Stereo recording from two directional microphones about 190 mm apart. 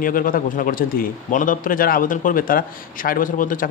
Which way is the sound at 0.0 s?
45° left (ahead or behind).